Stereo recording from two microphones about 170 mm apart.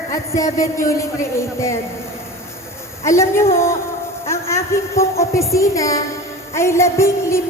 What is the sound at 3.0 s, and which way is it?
A man's voice, 15° left (ahead or behind).